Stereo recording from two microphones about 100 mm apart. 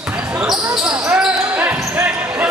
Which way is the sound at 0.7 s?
5° right (ahead or behind).